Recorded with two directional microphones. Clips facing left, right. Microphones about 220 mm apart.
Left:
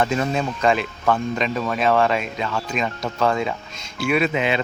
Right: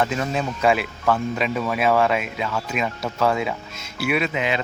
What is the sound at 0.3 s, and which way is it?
Speech, 5° right (ahead or behind).